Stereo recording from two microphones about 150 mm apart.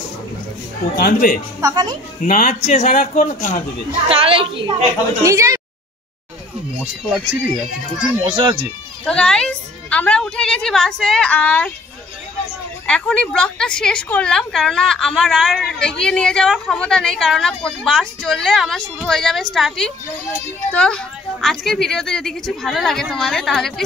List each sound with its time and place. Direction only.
0.9 s speech: 80° left
1.6 s speech: 25° right (ahead or behind)
2.2 s speech: 60° left (ahead or behind)
3.2 s speech: 60° left (ahead or behind)
4.1 s a child's voice: 40° right (ahead or behind)
5.2 s speech: 20° right (ahead or behind)
8.0 s a child's voice: 30° right (ahead or behind)
9.0 s a woman's voice: 5° left (ahead or behind)
12.8 s a woman's voice: 5° left (ahead or behind)